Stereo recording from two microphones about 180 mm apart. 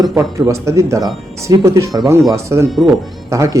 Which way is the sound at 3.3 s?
15° right (ahead or behind).